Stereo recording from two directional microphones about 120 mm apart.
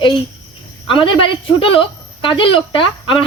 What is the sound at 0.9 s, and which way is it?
A woman's voice, 45° left (ahead or behind).